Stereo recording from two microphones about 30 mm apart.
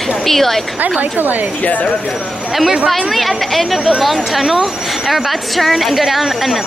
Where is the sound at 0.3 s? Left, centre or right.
Centre.